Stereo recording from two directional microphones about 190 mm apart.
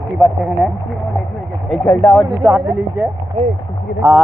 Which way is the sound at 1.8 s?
15° left (ahead or behind).